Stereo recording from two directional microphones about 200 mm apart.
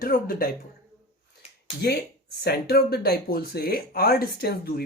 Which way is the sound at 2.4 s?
50° left (ahead or behind).